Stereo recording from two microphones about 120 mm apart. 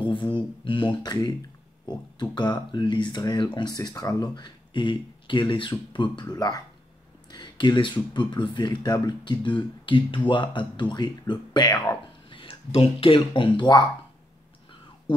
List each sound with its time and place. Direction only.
0.0 s a sound: 40° left (ahead or behind)
1.9 s speech: 35° left (ahead or behind)
11.7 s speech: 25° left (ahead or behind)
12.3 s speech: 45° left (ahead or behind)